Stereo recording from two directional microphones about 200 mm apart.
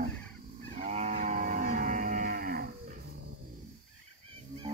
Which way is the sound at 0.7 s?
35° right (ahead or behind).